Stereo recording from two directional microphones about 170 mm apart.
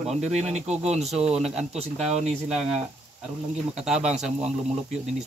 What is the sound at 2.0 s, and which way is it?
Speech, 40° right (ahead or behind).